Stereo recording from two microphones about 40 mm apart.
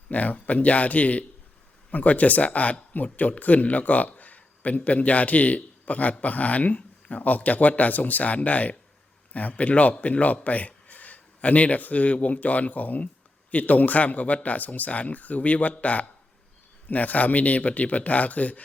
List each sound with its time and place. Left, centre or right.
0.1 s a man's voice: left